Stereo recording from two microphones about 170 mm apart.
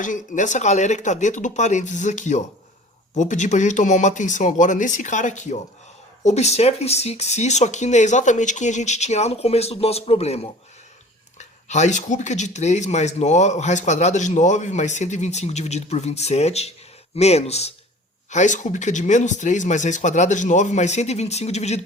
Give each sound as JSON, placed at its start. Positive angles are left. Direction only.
{"t": 0.0, "sound": "speech", "side_deg": 50}